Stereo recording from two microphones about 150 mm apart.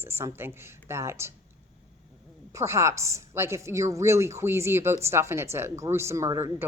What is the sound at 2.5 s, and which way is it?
A woman's voice, 20° right (ahead or behind).